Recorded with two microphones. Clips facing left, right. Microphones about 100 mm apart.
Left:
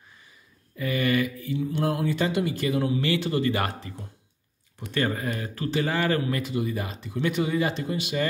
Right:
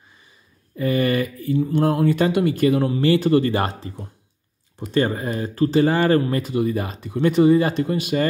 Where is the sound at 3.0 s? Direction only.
35° right (ahead or behind).